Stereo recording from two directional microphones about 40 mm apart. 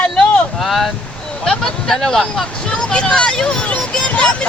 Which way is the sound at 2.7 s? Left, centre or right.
Left.